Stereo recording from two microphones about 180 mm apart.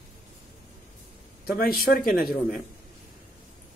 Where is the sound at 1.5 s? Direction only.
55° left (ahead or behind).